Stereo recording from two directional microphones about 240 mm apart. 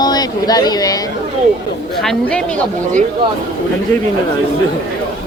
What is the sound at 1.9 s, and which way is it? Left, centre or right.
Speech, centre.